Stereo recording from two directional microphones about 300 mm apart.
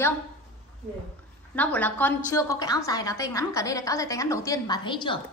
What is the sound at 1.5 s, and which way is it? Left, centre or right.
Female singing, centre.